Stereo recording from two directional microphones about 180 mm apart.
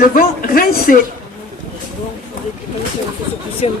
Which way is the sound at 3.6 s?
35° left (ahead or behind).